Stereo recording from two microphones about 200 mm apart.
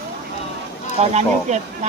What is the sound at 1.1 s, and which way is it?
Speech, 35° right (ahead or behind).